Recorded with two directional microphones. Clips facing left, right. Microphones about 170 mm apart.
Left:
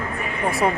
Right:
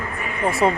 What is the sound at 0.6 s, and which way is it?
Speech, 25° right (ahead or behind).